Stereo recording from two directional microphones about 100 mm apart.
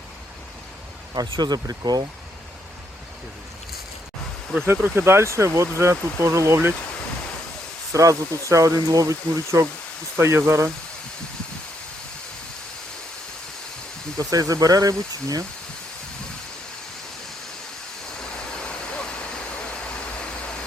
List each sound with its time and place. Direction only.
1.1 s speech: 45° right (ahead or behind)
4.6 s speech: 20° right (ahead or behind)
7.9 s speech: 35° right (ahead or behind)
14.2 s speech: 35° right (ahead or behind)
18.3 s vehicle: 10° left (ahead or behind)